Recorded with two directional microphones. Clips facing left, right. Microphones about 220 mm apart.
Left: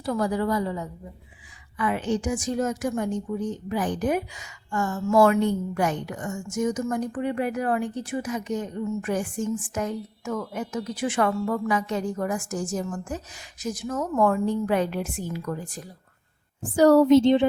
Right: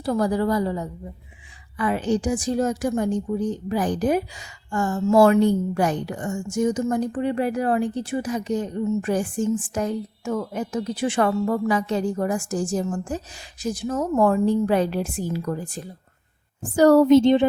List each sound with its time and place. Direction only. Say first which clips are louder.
0.0 s a woman's voice: right 3 dB; 35° right (ahead or behind)
16.7 s a woman's voice: right 2 dB; 45° right (ahead or behind)